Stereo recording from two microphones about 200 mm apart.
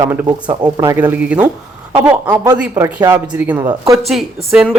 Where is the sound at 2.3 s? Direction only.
20° right (ahead or behind).